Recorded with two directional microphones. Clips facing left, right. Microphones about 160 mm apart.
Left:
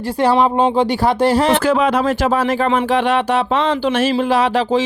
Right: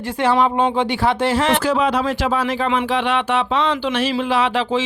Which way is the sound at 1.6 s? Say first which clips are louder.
Left 3 dB; 55° left (ahead or behind).